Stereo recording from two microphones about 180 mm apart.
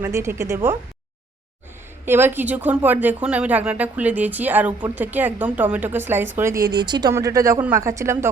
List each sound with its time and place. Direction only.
0.0 s speech: 15° right (ahead or behind)
2.0 s speech: 10° right (ahead or behind)